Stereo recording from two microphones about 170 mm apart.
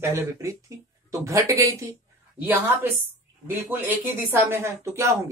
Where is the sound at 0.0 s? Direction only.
20° right (ahead or behind).